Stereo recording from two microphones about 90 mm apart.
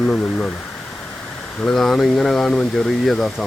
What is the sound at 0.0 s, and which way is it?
Speech, 10° left (ahead or behind).